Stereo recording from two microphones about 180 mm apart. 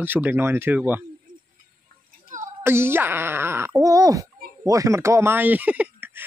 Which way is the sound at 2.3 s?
45° right (ahead or behind).